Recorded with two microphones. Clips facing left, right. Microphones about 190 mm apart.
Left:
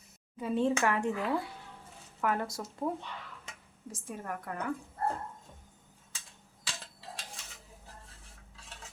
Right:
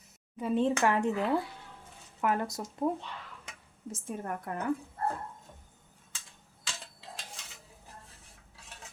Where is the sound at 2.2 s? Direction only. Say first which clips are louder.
Right 2 dB; 20° right (ahead or behind).